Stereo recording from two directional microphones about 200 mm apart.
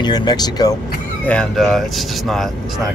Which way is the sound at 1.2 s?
5° left (ahead or behind).